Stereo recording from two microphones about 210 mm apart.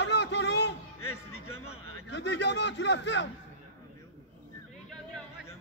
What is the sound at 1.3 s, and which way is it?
Speech, 30° left (ahead or behind).